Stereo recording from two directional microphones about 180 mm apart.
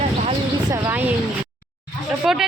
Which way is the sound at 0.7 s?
10° right (ahead or behind).